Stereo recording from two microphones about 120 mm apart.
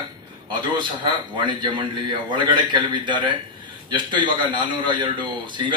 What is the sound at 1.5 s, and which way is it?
Speech, 40° right (ahead or behind).